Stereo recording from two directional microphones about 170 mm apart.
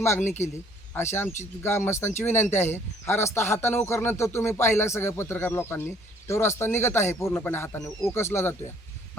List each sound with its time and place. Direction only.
0.0 s speech: 15° left (ahead or behind)